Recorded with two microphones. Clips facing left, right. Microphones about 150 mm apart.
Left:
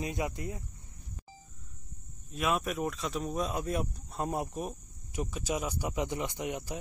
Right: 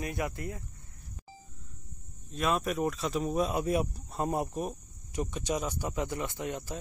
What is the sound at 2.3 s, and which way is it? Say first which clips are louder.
Speech: right 2 dB; centre (ahead or behind).